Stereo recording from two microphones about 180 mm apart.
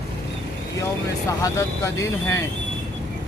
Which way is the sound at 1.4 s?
15° left (ahead or behind).